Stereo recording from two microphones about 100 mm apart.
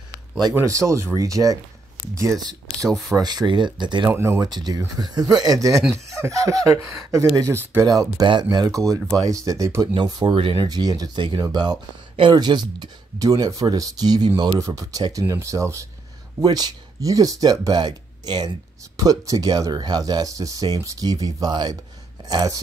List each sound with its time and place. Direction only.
0.6 s speech: 30° right (ahead or behind); by 4.1 s 50° right (ahead or behind)
4.1 s speech: 25° right (ahead or behind)
4.4 s speech: 45° right (ahead or behind)
10.3 s speech: 60° right (ahead or behind)
18.9 s speech: 35° right (ahead or behind)